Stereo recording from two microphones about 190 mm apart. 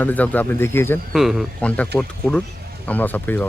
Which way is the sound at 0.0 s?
10° left (ahead or behind).